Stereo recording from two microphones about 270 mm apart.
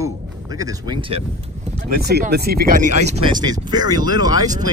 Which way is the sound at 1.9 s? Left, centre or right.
Right.